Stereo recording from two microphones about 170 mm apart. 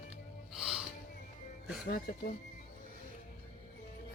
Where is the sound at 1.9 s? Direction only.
60° left (ahead or behind).